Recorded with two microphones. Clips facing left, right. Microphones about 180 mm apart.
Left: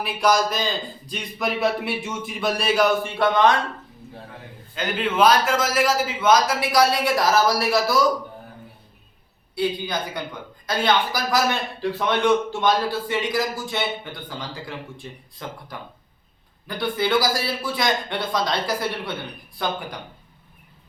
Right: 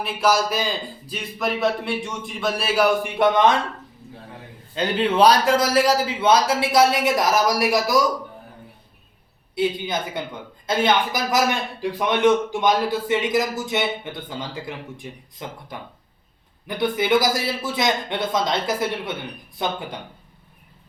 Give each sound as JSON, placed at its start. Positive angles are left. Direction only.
{"t": 0.0, "sound": "a man's voice", "side_deg": 0}
{"t": 4.7, "sound": "a man's voice", "side_deg": -30}
{"t": 9.6, "sound": "a man's voice", "side_deg": -20}